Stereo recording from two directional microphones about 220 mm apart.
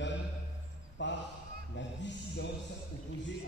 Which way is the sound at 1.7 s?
55° left (ahead or behind).